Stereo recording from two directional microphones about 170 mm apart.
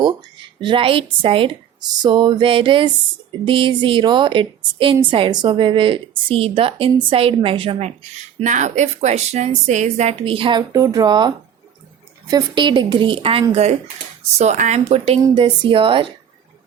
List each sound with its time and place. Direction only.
0.0 s a woman's voice: 25° right (ahead or behind)
8.4 s a woman's voice: 45° right (ahead or behind)
10.7 s a woman's voice: 20° right (ahead or behind)